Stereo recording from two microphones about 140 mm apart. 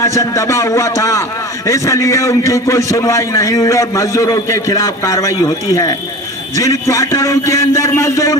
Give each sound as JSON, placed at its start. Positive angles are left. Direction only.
{"t": 0.0, "sound": "a man's voice", "side_deg": 20}